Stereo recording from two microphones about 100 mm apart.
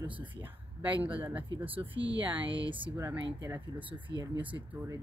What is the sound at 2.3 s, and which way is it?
Speech, 60° right (ahead or behind).